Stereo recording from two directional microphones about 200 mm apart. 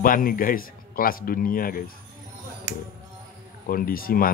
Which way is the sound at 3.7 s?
45° left (ahead or behind).